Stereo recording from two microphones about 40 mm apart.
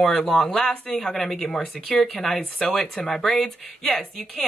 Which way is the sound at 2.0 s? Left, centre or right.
Centre.